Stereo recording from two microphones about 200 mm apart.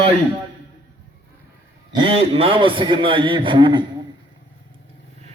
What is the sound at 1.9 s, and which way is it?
A man's voice, 25° right (ahead or behind).